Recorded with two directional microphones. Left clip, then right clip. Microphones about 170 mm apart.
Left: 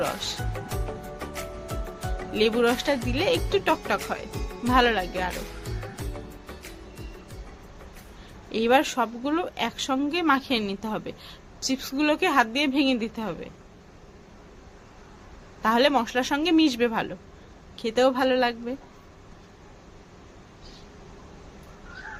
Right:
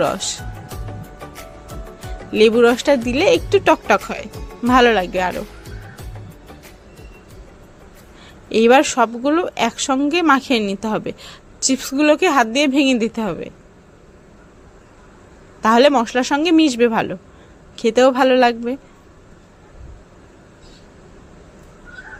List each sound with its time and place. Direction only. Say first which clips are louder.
0.0 s speech: right 9 dB; 40° right (ahead or behind)
1.3 s music: left 1 dB; centre (ahead or behind)
2.3 s speech: right 10 dB; 35° right (ahead or behind)
8.4 s speech: right 9 dB; 45° right (ahead or behind)
15.6 s speech: right 9 dB; 40° right (ahead or behind)